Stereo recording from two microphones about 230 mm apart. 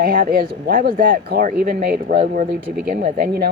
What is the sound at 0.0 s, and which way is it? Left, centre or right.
Speech, right.